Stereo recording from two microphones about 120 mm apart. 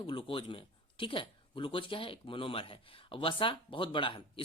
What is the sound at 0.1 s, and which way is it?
Speech, 45° left (ahead or behind).